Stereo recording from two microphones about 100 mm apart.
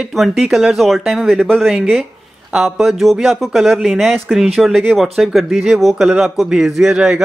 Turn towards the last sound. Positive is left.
turn(degrees=-5)  # may be behind; listen again after turning